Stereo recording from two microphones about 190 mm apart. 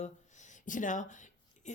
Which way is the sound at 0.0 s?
40° left (ahead or behind).